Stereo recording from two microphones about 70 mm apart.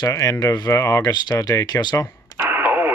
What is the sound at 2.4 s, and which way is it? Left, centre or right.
Radio, right.